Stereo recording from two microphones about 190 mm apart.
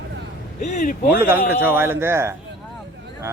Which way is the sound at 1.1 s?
10° right (ahead or behind).